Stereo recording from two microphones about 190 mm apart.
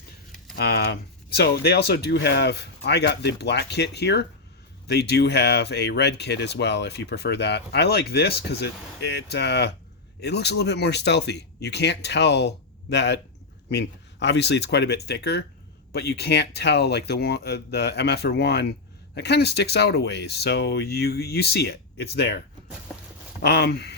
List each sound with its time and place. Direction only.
0.5 s speech: 55° left (ahead or behind)
23.4 s speech: 60° left (ahead or behind)